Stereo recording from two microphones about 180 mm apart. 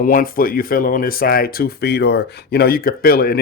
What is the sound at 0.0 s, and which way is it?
A man's voice, 50° left (ahead or behind).